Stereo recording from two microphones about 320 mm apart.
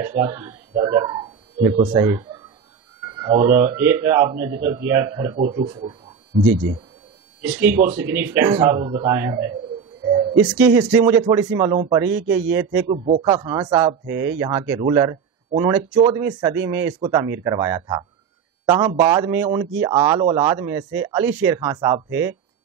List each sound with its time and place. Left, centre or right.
0.0 s speech: centre
7.4 s speech: centre
7.7 s speech: right
8.1 s speech: centre
10.4 s speech: centre